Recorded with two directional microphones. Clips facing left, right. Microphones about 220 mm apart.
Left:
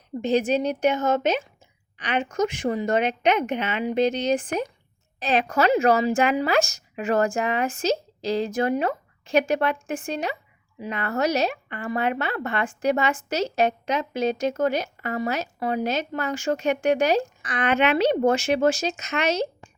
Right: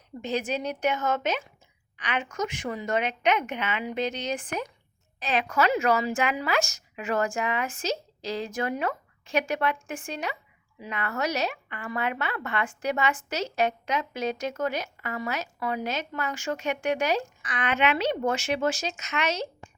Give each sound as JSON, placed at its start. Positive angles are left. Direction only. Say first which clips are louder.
{"t": 0.2, "sound": "a woman's voice", "louder": "left 8 dB", "side_deg": 30}